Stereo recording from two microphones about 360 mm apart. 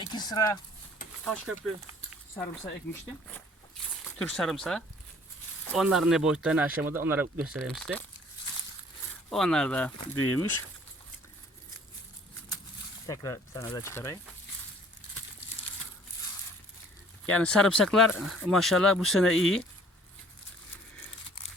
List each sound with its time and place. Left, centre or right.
0.1 s speech: centre
4.2 s speech: centre
9.3 s speech: centre
10.2 s speech: left
13.1 s speech: centre
17.2 s speech: centre